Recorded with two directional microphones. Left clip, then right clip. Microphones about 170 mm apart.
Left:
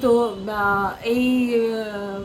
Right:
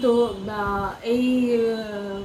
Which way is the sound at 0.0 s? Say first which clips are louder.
Left 2 dB; 60° left (ahead or behind).